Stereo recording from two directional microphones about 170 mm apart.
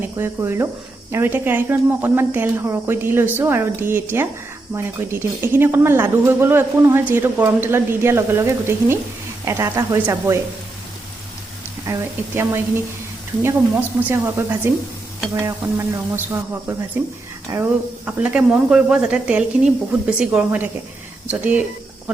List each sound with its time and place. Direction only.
0.0 s speech: 15° right (ahead or behind)
11.9 s speech: 15° right (ahead or behind)